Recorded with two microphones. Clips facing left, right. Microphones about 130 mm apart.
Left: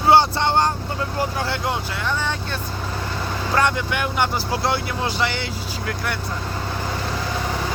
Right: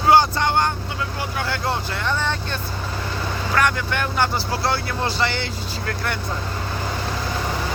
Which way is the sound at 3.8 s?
10° left (ahead or behind).